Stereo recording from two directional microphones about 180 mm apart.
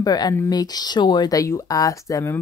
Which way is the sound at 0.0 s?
20° left (ahead or behind).